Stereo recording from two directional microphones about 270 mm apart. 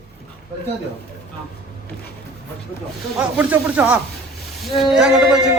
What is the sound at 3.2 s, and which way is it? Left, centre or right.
A woman's voice, centre.